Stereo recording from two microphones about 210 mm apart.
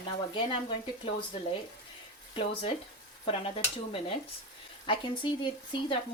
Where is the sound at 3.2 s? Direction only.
25° left (ahead or behind).